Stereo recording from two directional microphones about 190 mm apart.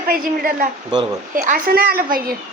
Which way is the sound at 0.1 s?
45° right (ahead or behind).